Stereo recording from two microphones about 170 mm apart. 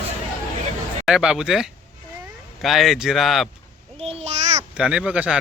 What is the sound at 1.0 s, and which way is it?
Speech, 5° right (ahead or behind).